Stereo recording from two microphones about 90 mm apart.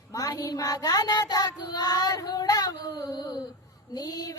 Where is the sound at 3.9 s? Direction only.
45° left (ahead or behind).